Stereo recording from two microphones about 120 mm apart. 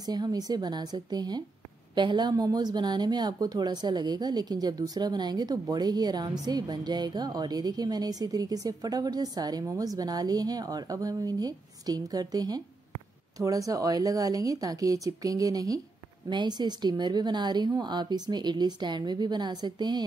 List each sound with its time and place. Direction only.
0.0 s a woman's voice: 35° right (ahead or behind)